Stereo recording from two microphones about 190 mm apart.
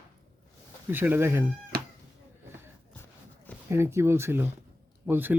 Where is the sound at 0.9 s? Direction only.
10° right (ahead or behind).